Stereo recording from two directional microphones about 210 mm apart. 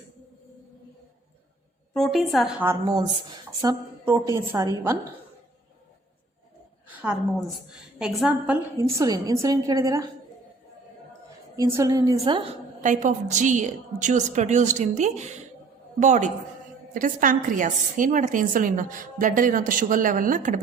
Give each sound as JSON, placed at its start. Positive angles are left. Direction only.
{"t": 1.9, "sound": "a woman's voice", "side_deg": 0}
{"t": 2.6, "sound": "a woman's voice", "side_deg": -20}
{"t": 6.9, "sound": "a woman's voice", "side_deg": -5}
{"t": 11.5, "sound": "a woman's voice", "side_deg": -15}
{"t": 12.8, "sound": "a woman's voice", "side_deg": -35}